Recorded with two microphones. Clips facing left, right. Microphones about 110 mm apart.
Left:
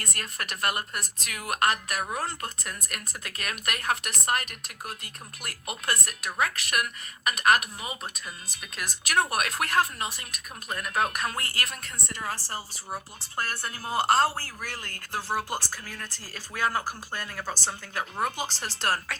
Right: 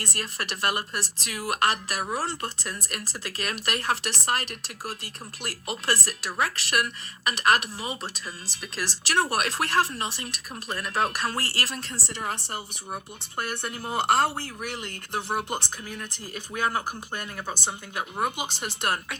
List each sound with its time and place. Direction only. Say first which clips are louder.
0.0 s a woman's voice: right 3 dB; 25° right (ahead or behind)
8.5 s speech: right 2 dB; 90° right
9.0 s a woman's voice: right 1 dB; 30° right (ahead or behind)